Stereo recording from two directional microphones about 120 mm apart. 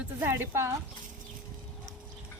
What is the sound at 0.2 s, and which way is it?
Speech, 20° right (ahead or behind).